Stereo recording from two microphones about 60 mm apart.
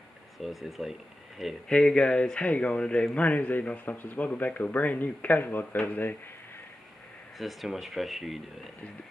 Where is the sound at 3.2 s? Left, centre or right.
Left.